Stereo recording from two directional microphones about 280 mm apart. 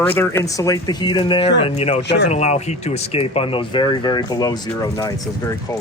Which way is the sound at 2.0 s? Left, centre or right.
Left.